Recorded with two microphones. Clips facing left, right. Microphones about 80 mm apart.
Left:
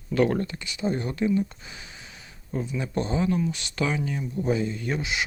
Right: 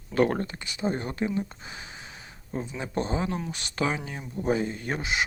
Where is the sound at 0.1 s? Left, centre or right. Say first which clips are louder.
Left 1 dB; right.